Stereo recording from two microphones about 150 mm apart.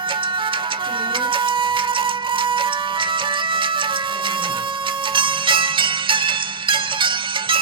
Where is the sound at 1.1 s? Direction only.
35° right (ahead or behind).